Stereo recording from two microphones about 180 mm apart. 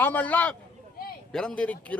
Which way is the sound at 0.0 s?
10° left (ahead or behind).